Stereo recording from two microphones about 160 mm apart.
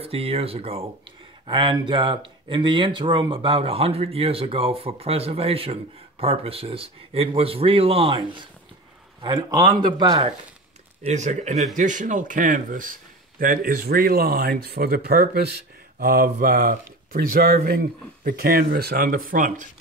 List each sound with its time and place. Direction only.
0.0 s speech: 35° right (ahead or behind)
11.1 s speech: 45° right (ahead or behind); by 15.4 s 75° right (ahead or behind)
16.0 s speech: 65° right (ahead or behind)